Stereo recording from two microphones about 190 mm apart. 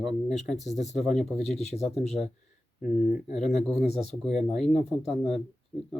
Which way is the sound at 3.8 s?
35° left (ahead or behind).